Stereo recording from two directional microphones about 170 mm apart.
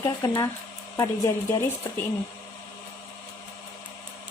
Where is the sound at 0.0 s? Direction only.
15° left (ahead or behind).